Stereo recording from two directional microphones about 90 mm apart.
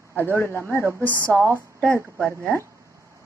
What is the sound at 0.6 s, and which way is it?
Speech, 30° right (ahead or behind).